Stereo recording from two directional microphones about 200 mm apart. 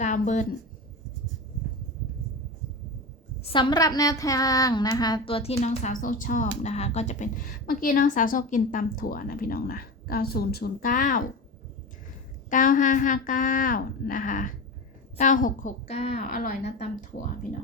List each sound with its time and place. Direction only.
0.0 s a woman's voice: 35° left (ahead or behind)
3.4 s a woman's voice: 25° left (ahead or behind); by 11.3 s 40° left (ahead or behind)
12.5 s a woman's voice: 40° left (ahead or behind)